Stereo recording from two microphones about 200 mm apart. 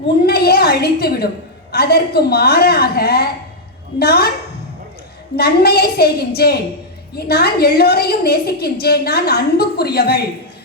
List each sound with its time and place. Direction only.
0.3 s a woman's voice: 50° left (ahead or behind)
5.4 s a woman's voice: 50° left (ahead or behind)